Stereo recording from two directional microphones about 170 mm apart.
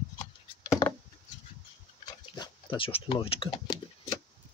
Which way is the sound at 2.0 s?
25° left (ahead or behind).